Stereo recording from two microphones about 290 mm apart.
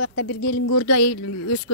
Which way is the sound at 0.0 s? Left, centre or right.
Left.